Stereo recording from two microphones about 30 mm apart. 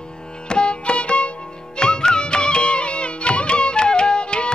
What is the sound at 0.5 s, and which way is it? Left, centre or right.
Music, left.